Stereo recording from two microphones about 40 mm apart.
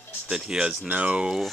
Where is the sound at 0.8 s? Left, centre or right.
Right.